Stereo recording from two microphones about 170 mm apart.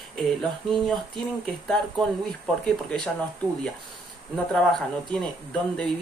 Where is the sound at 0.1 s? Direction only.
5° left (ahead or behind).